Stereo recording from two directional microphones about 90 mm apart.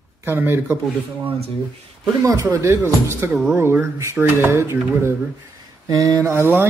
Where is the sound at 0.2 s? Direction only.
25° right (ahead or behind).